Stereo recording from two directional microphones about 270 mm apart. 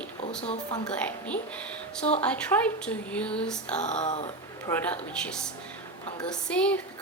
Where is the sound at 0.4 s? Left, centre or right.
Left.